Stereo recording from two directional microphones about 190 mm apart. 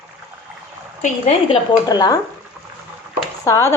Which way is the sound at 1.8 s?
20° left (ahead or behind).